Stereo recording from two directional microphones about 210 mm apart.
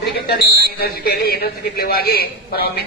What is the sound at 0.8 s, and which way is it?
A man's voice, 45° left (ahead or behind).